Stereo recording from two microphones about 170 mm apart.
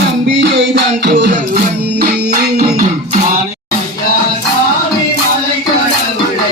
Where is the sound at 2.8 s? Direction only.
50° right (ahead or behind).